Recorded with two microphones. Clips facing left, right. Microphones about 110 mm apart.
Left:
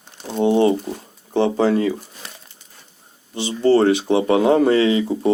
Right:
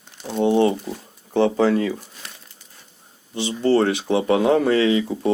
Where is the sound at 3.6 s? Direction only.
30° left (ahead or behind).